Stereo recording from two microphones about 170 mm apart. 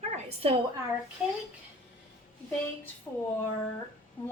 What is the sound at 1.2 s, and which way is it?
Speech, 5° right (ahead or behind).